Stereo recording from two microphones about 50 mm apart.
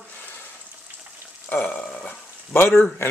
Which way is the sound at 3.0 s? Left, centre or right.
Left.